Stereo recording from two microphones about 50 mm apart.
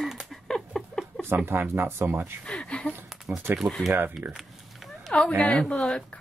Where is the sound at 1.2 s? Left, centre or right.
Right.